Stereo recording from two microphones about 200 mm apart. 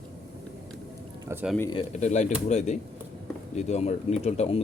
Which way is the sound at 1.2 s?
10° right (ahead or behind).